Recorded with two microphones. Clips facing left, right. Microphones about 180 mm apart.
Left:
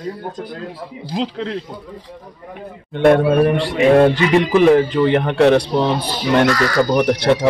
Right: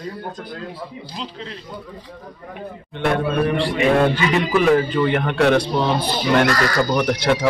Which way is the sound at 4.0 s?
30° left (ahead or behind).